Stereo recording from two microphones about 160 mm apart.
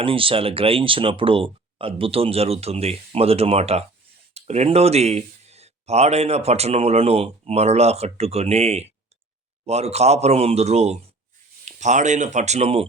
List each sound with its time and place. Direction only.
0.0 s speech: 35° right (ahead or behind)